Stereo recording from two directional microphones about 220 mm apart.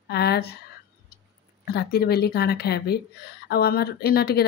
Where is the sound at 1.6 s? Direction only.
45° left (ahead or behind).